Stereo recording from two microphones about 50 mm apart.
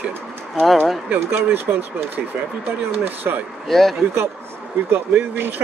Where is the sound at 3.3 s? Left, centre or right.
Right.